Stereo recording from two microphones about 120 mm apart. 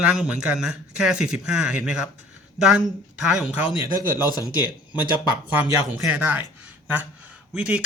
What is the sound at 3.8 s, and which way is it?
Speech, 40° left (ahead or behind).